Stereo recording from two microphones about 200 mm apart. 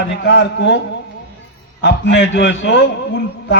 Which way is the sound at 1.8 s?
65° left (ahead or behind).